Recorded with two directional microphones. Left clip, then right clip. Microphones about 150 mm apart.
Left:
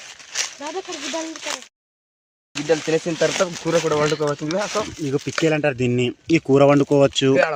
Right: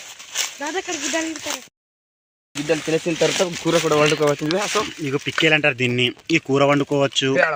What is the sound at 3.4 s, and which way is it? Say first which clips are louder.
Speech: right 1 dB; 90° right.